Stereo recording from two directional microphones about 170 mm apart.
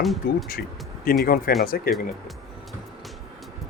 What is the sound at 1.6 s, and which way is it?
Speech, 60° left (ahead or behind).